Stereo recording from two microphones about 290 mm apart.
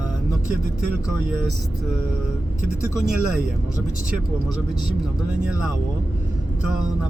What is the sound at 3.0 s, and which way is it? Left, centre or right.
Speech, centre.